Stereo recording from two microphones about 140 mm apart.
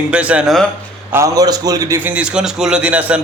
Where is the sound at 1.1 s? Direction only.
25° right (ahead or behind).